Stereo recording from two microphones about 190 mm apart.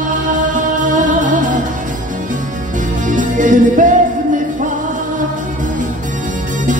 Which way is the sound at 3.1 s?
45° right (ahead or behind).